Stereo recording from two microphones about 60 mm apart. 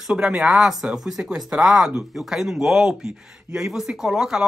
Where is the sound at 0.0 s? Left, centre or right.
Centre.